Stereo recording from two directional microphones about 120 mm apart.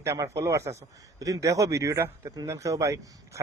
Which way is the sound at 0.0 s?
25° right (ahead or behind).